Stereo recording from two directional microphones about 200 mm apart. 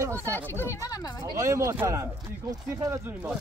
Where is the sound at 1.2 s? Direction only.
15° right (ahead or behind).